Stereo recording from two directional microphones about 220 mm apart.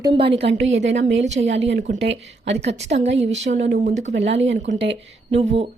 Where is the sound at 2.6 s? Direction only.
30° right (ahead or behind).